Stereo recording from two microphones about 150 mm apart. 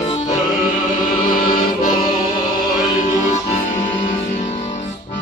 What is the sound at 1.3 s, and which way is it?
Music, 65° left (ahead or behind).